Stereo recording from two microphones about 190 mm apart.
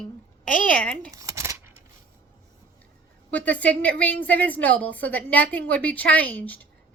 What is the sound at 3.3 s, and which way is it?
A woman's voice, 5° left (ahead or behind).